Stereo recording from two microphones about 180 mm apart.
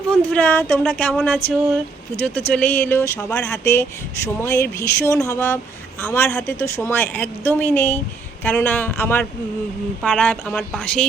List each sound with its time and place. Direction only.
0.1 s a woman's voice: 10° left (ahead or behind)
2.5 s a woman's voice: 10° left (ahead or behind)